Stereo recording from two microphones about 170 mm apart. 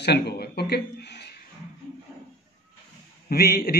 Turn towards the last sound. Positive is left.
turn(degrees=65)  # may be behind; listen again after turning